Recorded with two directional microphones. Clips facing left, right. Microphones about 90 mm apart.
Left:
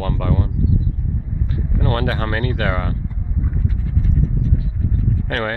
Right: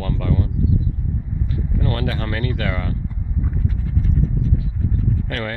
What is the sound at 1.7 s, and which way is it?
Speech, 55° left (ahead or behind).